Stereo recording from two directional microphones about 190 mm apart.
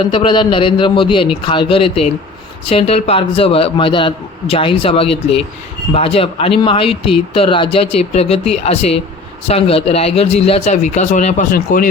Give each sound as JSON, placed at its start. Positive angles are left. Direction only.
{"t": 0.0, "sound": "speech", "side_deg": 25}